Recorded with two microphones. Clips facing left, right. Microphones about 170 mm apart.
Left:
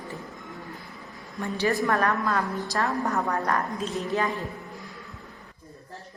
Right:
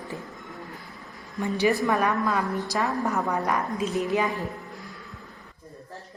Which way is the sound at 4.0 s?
15° right (ahead or behind).